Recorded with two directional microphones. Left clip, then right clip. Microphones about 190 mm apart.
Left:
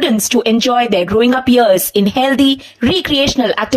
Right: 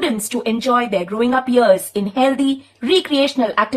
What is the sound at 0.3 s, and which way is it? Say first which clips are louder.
Speech: left 8 dB; 30° left (ahead or behind).